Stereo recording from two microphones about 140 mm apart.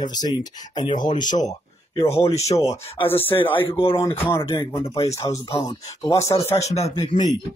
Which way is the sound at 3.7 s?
40° left (ahead or behind).